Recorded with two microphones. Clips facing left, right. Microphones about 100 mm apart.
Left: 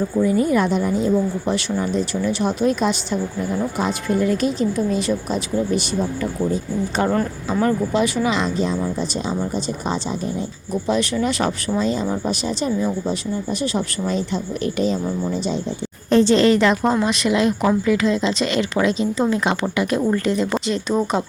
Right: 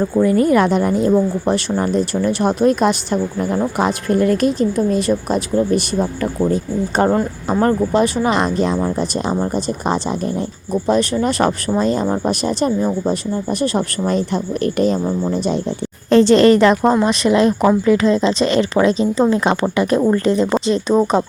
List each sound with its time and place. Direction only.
0.2 s speech: 60° right (ahead or behind)
1.1 s speech: 45° right (ahead or behind)
7.1 s speech: 30° right (ahead or behind)
7.6 s speech: 40° right (ahead or behind); by 10.4 s 55° right (ahead or behind)
10.7 s speech: 40° right (ahead or behind)
16.0 s a woman's voice: 90° right
16.4 s a woman's voice: 50° right (ahead or behind)